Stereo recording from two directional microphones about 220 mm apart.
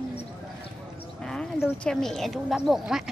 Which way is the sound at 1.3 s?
5° left (ahead or behind).